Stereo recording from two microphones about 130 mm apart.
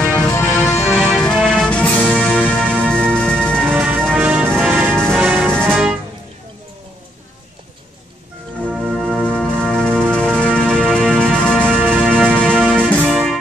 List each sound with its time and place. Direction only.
0.0 s music: 5° left (ahead or behind)
3.7 s music: 10° right (ahead or behind)
5.5 s music: 5° left (ahead or behind)
8.6 s music: centre (ahead or behind)